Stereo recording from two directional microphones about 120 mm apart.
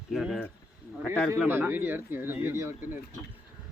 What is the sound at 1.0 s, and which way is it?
Speech, 15° left (ahead or behind).